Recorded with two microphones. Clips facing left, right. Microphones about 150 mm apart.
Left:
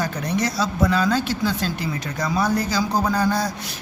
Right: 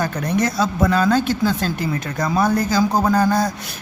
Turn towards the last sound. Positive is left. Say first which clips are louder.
# right 4 dB
turn(degrees=-50)  # may be behind; listen again after turning